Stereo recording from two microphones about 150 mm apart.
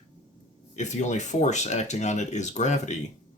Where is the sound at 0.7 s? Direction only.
50° left (ahead or behind).